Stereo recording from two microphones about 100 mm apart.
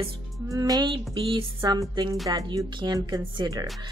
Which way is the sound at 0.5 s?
35° right (ahead or behind).